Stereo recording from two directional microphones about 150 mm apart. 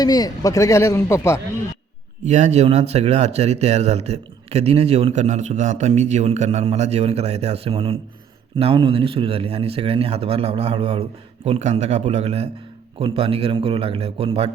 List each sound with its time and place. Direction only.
0.0 s a man's voice: 25° left (ahead or behind)
2.2 s a man's voice: 50° right (ahead or behind)